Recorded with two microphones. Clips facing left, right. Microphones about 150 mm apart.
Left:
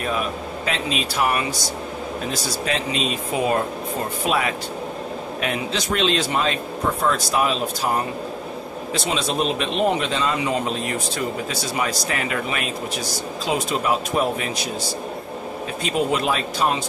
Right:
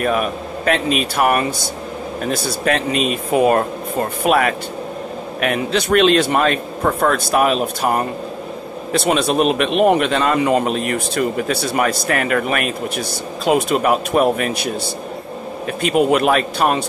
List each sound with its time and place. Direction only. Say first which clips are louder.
0.0 s speech: right 6 dB; 60° right (ahead or behind)
15.8 s speech: right 7 dB; 65° right (ahead or behind)